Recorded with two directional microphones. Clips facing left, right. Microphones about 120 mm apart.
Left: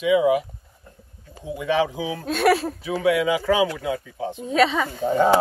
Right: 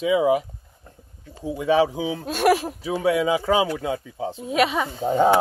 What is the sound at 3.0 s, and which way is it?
Speech, 30° right (ahead or behind).